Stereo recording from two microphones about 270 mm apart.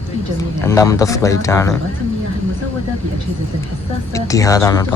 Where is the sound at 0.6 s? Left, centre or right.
Centre.